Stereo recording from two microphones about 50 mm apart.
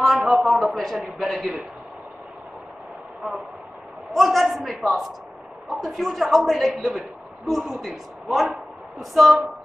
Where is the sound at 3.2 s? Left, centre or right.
Centre.